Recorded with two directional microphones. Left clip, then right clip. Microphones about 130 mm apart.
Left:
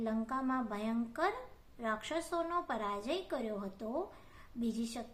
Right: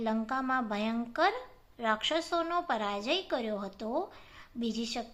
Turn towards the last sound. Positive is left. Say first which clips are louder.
# right 5 dB
turn(degrees=-20)  # may be behind; listen again after turning